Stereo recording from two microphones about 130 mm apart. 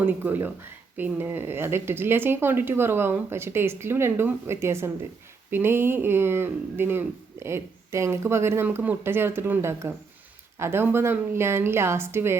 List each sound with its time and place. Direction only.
0.0 s speech: 15° right (ahead or behind)